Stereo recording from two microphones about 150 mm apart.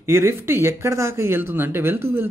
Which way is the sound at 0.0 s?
15° right (ahead or behind).